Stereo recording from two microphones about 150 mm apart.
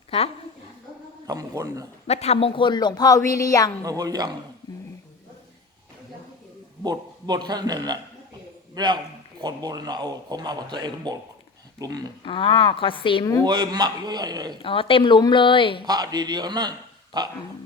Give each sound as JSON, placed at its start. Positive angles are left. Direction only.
{"t": 0.1, "sound": "a woman's voice", "side_deg": 40}
{"t": 1.3, "sound": "a man's voice", "side_deg": -25}
{"t": 2.0, "sound": "speech", "side_deg": 45}
{"t": 3.8, "sound": "a man's voice", "side_deg": -25}
{"t": 6.8, "sound": "a man's voice", "side_deg": -25}
{"t": 12.2, "sound": "a woman's voice", "side_deg": 35}
{"t": 13.4, "sound": "a man's voice", "side_deg": -30}
{"t": 14.6, "sound": "a woman's voice", "side_deg": 35}
{"t": 15.9, "sound": "a man's voice", "side_deg": -25}